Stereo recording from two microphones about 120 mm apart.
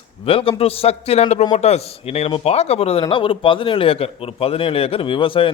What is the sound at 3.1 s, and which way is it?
A man's voice, 45° left (ahead or behind).